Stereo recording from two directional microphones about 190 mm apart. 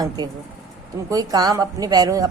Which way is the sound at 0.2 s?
20° right (ahead or behind).